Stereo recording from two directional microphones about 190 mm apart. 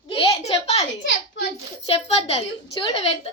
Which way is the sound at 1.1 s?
70° left (ahead or behind).